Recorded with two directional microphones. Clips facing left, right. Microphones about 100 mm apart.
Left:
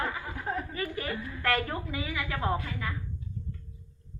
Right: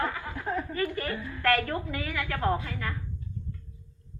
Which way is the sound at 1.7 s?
10° left (ahead or behind).